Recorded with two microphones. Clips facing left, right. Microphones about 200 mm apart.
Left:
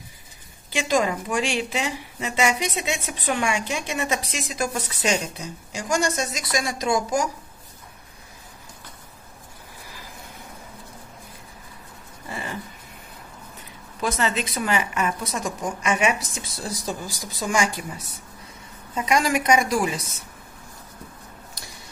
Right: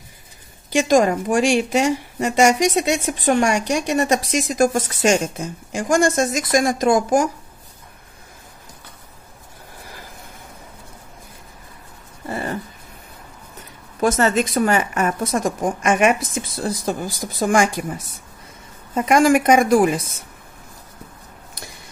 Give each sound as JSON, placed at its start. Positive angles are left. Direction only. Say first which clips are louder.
{"t": 0.7, "sound": "a woman's voice", "louder": "right 7 dB", "side_deg": -45}
{"t": 12.3, "sound": "a sound", "louder": "right 8 dB", "side_deg": -40}
{"t": 14.0, "sound": "a woman's voice", "louder": "right 7 dB", "side_deg": -45}